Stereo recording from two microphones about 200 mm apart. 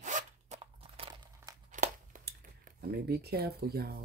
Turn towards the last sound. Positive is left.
turn(degrees=-50)  # may be behind; listen again after turning